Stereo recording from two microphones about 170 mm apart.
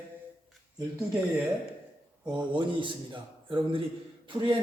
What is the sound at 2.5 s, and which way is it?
A man's voice, 30° right (ahead or behind).